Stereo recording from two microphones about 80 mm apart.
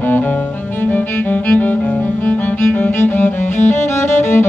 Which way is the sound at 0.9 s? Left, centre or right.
Left.